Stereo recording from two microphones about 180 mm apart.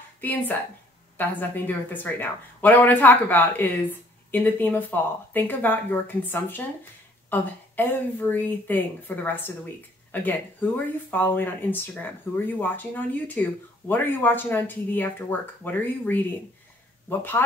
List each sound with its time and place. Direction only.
0.2 s speech: 10° left (ahead or behind)